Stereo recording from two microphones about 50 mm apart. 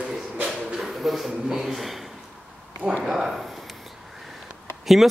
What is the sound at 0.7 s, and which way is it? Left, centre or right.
A man's voice, centre.